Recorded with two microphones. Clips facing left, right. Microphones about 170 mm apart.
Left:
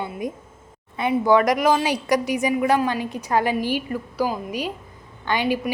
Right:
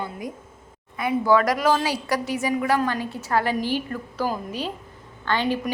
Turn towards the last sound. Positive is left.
turn(degrees=15)  # may be behind; listen again after turning